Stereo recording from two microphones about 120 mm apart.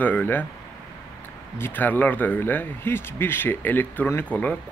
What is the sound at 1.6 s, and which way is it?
Speech, 15° left (ahead or behind).